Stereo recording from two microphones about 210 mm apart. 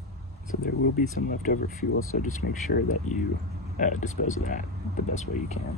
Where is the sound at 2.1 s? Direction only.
45° left (ahead or behind).